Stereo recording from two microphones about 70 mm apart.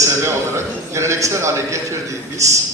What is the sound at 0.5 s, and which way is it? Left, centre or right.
A man's voice, right.